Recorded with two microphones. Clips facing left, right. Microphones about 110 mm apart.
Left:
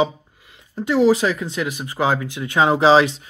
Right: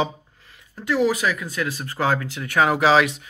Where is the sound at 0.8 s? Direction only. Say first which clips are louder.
Left 5 dB; 25° left (ahead or behind).